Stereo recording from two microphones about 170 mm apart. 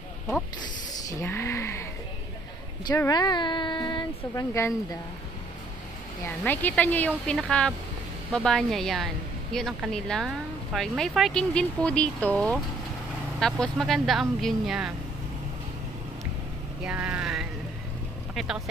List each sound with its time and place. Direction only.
0.6 s a sound: 20° left (ahead or behind)
3.1 s speech: 25° left (ahead or behind)
6.2 s a woman's voice: 10° left (ahead or behind)
16.8 s vehicle: 5° right (ahead or behind)
18.3 s speech: centre (ahead or behind)